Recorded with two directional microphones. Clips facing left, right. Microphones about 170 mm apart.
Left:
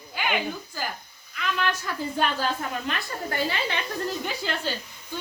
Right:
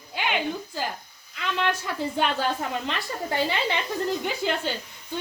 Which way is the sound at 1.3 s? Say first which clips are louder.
Right 1 dB; 25° right (ahead or behind).